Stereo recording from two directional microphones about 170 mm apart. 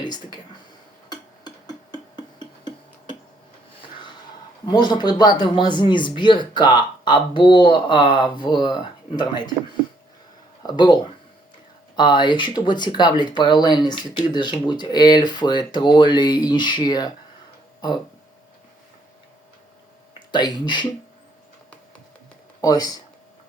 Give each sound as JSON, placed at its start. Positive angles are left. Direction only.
{"t": 1.1, "sound": "a sound", "side_deg": 25}
{"t": 4.6, "sound": "speech", "side_deg": 25}
{"t": 10.6, "sound": "speech", "side_deg": 25}
{"t": 11.9, "sound": "speech", "side_deg": 25}
{"t": 20.1, "sound": "speech", "side_deg": 25}
{"t": 22.6, "sound": "speech", "side_deg": 25}